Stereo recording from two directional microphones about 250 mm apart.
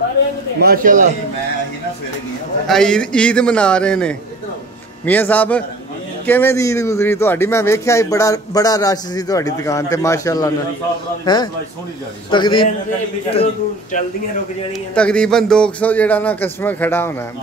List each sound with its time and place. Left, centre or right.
0.6 s speech: right
2.7 s a man's voice: centre
15.0 s a man's voice: centre